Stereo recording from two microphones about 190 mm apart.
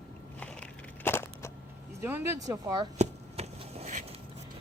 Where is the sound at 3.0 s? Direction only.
35° right (ahead or behind).